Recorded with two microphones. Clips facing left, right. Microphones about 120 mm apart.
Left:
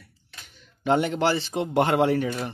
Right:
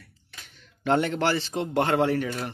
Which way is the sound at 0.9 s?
15° left (ahead or behind).